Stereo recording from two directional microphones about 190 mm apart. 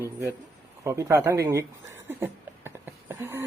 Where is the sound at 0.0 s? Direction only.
15° right (ahead or behind).